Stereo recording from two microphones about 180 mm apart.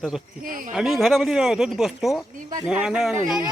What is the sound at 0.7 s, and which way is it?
Speech, centre (ahead or behind).